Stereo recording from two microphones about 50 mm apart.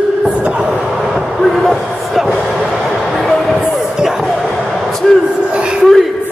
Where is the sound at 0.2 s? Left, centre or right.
Right.